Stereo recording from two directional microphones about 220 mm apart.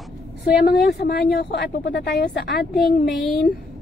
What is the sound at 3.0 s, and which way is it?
Speech, 45° left (ahead or behind).